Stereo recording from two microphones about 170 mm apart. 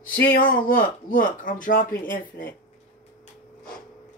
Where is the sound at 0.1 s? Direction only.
55° left (ahead or behind).